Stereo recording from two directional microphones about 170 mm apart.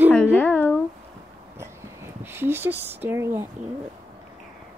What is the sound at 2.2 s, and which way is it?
Speech, 15° right (ahead or behind).